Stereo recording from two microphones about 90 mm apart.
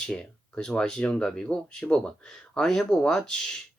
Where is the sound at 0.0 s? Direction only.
10° left (ahead or behind).